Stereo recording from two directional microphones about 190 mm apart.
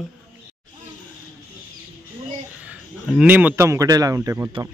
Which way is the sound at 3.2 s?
10° right (ahead or behind).